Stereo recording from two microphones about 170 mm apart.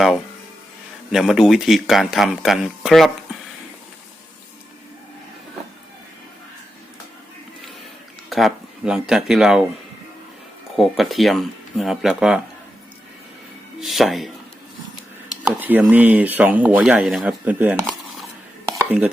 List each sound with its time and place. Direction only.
1.1 s speech: centre (ahead or behind)
8.3 s speech: centre (ahead or behind)
10.8 s speech: centre (ahead or behind)
13.7 s speech: centre (ahead or behind)
15.4 s speech: 10° right (ahead or behind)
18.8 s dishes: 10° right (ahead or behind)